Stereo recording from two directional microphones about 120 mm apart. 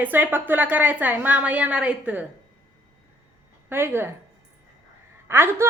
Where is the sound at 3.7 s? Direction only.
20° right (ahead or behind).